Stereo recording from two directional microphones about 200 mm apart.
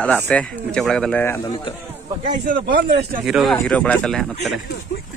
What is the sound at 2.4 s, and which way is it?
Speech, 50° right (ahead or behind).